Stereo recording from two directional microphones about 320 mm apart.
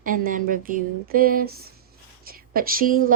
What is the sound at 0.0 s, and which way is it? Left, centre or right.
A woman's voice, right.